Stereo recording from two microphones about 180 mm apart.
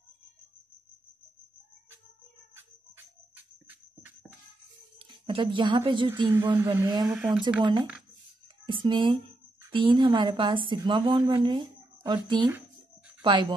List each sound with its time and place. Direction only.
3.6 s a sound: 10° right (ahead or behind)
4.9 s speech: 30° right (ahead or behind)
7.1 s speech: 5° right (ahead or behind)
8.6 s speech: 25° right (ahead or behind)